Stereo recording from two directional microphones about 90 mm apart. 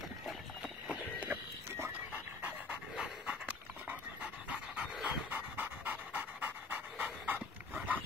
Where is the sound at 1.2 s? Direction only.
25° right (ahead or behind).